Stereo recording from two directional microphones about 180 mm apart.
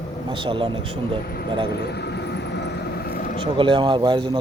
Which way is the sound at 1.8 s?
65° left (ahead or behind).